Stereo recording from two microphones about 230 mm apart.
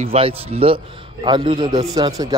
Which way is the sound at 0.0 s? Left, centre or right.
Right.